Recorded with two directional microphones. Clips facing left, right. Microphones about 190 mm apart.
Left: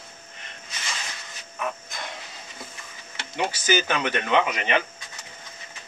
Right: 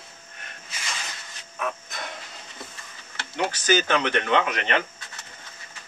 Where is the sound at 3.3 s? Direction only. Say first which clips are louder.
Right 1 dB; 10° left (ahead or behind).